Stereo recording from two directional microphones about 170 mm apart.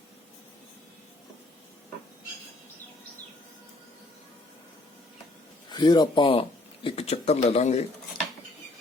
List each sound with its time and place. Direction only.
5.6 s speech: 25° left (ahead or behind)